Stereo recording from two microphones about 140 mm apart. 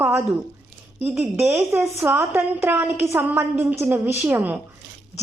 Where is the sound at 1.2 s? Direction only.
15° right (ahead or behind).